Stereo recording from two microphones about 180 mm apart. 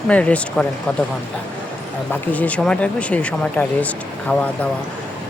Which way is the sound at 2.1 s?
10° left (ahead or behind).